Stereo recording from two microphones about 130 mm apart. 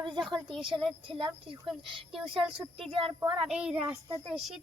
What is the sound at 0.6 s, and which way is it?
Speech, 40° right (ahead or behind).